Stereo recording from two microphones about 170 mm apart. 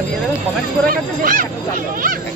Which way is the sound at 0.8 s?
55° right (ahead or behind).